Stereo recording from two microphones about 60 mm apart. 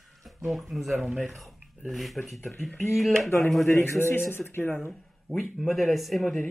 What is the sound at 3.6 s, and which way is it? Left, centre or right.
A man's voice, left.